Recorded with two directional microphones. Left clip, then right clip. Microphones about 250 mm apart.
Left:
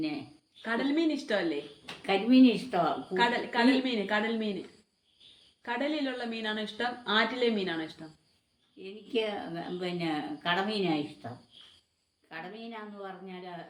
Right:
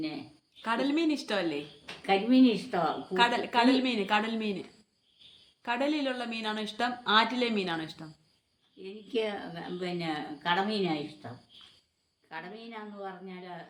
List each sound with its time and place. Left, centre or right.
0.6 s speech: right
2.0 s a woman's voice: centre
3.2 s speech: right
5.6 s speech: right
8.8 s a woman's voice: centre
12.3 s a woman's voice: centre